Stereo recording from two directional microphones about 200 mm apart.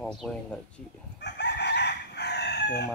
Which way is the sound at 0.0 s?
Centre (ahead or behind).